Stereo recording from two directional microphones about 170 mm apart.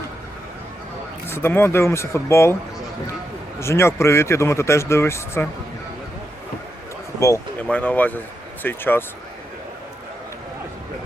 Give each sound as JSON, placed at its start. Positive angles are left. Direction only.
{"t": 1.3, "sound": "speech", "side_deg": 15}
{"t": 3.6, "sound": "speech", "side_deg": 15}
{"t": 7.2, "sound": "speech", "side_deg": 15}